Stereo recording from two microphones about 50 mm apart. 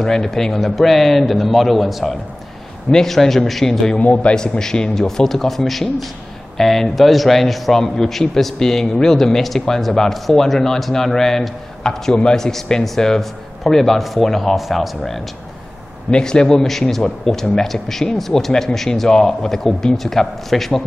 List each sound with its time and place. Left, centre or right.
0.0 s a man's voice: centre
4.0 s a man's voice: left
4.4 s a man's voice: centre
16.1 s a man's voice: centre